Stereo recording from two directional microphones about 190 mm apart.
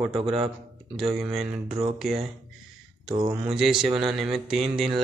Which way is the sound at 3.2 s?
5° right (ahead or behind).